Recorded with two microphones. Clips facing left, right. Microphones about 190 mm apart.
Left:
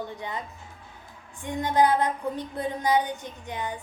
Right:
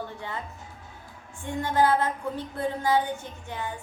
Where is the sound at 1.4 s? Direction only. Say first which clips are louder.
Left 1 dB; 15° left (ahead or behind).